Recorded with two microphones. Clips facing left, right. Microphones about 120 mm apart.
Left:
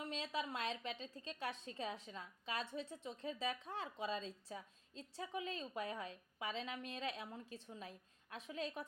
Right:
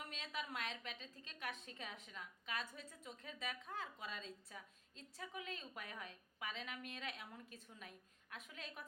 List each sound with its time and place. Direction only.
0.0 s a woman's voice: 30° left (ahead or behind)